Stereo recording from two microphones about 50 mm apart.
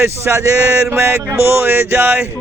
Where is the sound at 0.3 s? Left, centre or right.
Right.